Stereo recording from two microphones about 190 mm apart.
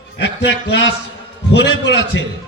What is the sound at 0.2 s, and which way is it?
A man's voice, 70° left (ahead or behind).